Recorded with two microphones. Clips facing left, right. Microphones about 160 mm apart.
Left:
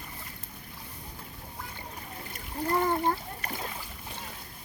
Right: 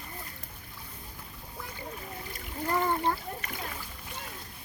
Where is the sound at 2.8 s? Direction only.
40° left (ahead or behind).